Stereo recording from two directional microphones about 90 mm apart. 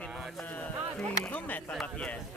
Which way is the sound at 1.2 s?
15° left (ahead or behind).